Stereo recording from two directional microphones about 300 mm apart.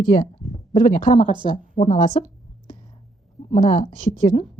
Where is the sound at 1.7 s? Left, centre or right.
Left.